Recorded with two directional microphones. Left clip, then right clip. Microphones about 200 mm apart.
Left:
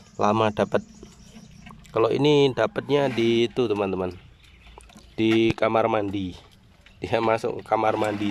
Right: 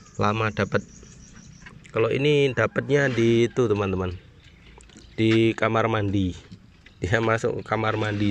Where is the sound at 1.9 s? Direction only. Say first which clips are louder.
Left 2 dB; 15° left (ahead or behind).